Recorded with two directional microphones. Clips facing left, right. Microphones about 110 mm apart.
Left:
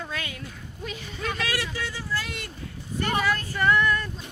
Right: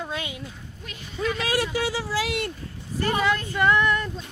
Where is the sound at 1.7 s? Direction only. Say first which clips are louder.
Right 6 dB; 85° right.